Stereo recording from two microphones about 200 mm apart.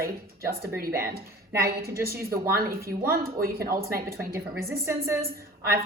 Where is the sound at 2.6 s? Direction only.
50° right (ahead or behind).